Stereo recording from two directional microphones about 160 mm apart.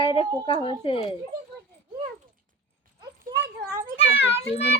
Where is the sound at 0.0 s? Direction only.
35° left (ahead or behind).